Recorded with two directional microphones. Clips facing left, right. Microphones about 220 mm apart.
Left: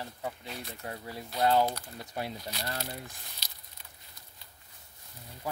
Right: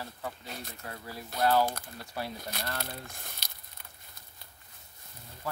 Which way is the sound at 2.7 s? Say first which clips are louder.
Left 1 dB; 55° right (ahead or behind).